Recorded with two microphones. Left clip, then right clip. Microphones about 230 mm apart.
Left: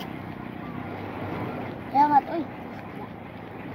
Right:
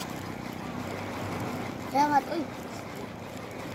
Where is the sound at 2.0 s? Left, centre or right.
Left.